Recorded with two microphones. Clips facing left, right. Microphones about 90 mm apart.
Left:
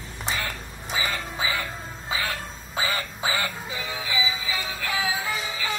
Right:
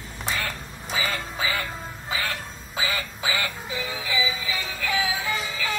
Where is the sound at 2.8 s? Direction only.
40° left (ahead or behind).